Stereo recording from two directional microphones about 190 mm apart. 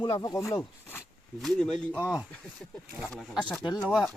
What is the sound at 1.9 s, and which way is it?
Speech, 10° right (ahead or behind).